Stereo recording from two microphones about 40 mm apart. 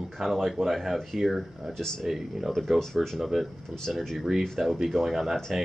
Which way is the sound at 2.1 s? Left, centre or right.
Centre.